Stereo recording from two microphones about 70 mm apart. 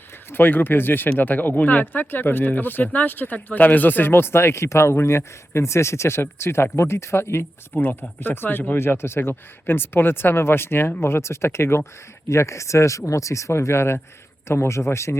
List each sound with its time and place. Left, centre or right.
0.3 s speech: left
7.7 s speech: left